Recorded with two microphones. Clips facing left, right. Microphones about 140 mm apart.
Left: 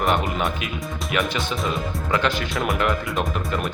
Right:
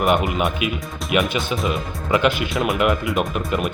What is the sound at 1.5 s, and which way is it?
Speech, 15° right (ahead or behind).